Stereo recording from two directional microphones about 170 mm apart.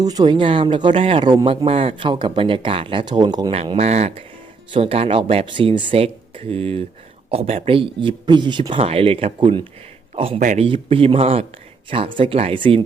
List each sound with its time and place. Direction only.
0.0 s speech: 20° right (ahead or behind)
3.5 s speech: 35° right (ahead or behind)